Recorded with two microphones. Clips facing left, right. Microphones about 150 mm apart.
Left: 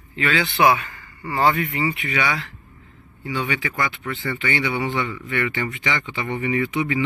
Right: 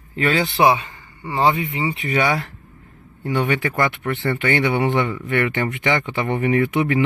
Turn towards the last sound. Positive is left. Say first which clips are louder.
# right 4 dB
turn(degrees=-55)  # may be behind; listen again after turning